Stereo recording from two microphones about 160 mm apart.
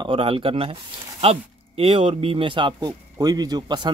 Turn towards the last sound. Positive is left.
turn(degrees=-25)  # may be behind; listen again after turning